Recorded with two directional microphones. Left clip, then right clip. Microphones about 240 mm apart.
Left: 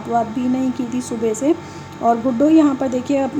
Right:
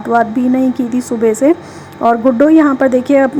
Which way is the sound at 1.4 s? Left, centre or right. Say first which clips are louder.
Right 7 dB; centre.